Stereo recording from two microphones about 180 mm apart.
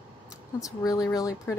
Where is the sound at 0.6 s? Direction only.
20° left (ahead or behind).